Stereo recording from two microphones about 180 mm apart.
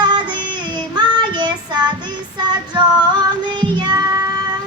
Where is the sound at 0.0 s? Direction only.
25° right (ahead or behind).